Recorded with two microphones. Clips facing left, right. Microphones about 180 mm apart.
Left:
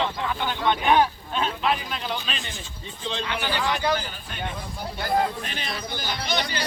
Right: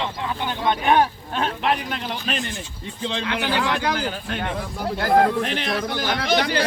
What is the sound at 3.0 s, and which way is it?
Speech, 75° right (ahead or behind).